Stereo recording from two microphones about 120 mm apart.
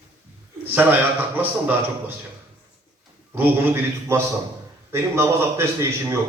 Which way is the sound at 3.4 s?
15° right (ahead or behind).